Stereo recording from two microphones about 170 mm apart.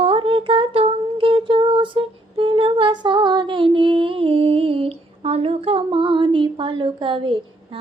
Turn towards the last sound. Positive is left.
turn(degrees=-30)  # may be behind; listen again after turning